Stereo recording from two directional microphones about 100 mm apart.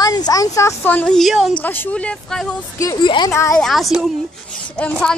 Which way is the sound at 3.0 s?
50° left (ahead or behind).